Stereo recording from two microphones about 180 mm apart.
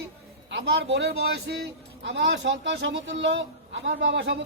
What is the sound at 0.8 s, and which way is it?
Speech, 70° right (ahead or behind).